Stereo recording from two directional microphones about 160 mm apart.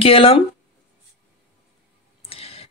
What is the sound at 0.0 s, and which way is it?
Speech, 35° left (ahead or behind).